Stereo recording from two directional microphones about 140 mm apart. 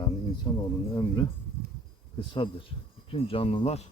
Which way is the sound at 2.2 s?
35° left (ahead or behind).